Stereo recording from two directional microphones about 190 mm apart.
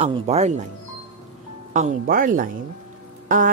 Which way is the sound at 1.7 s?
45° right (ahead or behind).